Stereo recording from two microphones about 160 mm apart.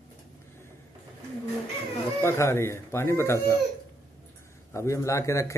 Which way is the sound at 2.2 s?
15° left (ahead or behind).